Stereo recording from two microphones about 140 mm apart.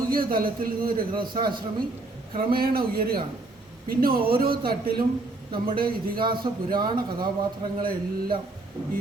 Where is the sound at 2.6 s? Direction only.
90° right.